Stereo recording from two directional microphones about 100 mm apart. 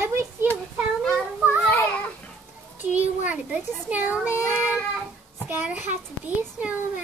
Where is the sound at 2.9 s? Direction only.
15° right (ahead or behind).